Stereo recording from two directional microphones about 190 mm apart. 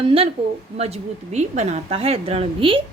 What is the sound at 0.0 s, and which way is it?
A woman's voice, 30° right (ahead or behind).